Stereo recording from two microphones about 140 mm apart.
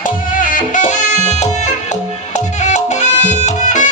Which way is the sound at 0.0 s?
75° left (ahead or behind).